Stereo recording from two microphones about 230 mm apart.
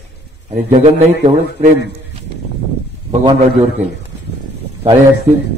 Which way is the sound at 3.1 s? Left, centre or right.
Right.